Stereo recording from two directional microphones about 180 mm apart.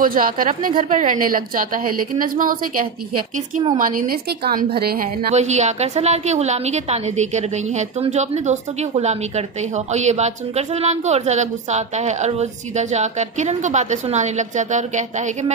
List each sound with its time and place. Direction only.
0.0 s a woman's voice: 50° right (ahead or behind)
5.3 s a woman's voice: 40° right (ahead or behind)